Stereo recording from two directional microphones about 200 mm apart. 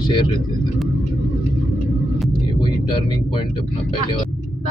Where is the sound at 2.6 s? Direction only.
20° left (ahead or behind).